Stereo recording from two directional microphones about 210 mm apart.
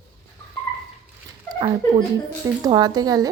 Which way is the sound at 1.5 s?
20° right (ahead or behind).